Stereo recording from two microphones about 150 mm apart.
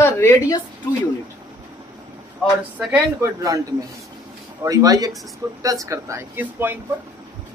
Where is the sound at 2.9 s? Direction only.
20° right (ahead or behind).